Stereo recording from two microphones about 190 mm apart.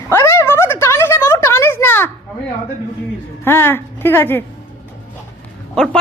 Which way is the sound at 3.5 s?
10° left (ahead or behind).